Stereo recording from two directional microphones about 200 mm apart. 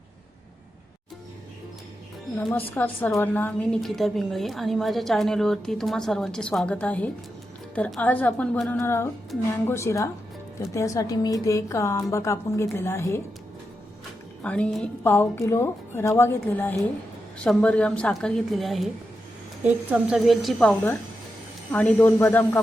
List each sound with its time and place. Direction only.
2.4 s a woman's voice: 10° left (ahead or behind)
14.4 s a woman's voice: 5° left (ahead or behind)
19.9 s a woman's voice: 5° right (ahead or behind)